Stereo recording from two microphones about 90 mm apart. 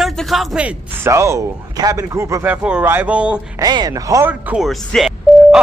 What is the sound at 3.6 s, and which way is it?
Speech, 50° right (ahead or behind).